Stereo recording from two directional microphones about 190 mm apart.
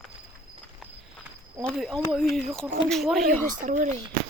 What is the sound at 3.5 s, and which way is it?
Speech, 40° right (ahead or behind).